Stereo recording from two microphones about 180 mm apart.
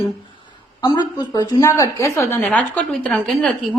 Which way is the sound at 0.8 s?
25° left (ahead or behind).